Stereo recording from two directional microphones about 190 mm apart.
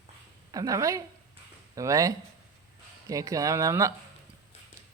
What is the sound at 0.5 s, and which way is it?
Speech, 20° right (ahead or behind).